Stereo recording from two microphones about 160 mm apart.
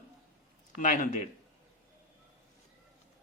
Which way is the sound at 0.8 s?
55° left (ahead or behind).